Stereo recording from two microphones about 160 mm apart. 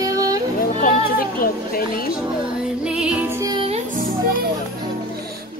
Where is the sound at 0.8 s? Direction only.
65° left (ahead or behind).